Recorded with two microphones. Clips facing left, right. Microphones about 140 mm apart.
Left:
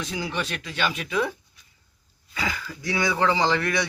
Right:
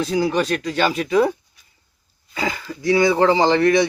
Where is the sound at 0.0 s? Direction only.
40° right (ahead or behind).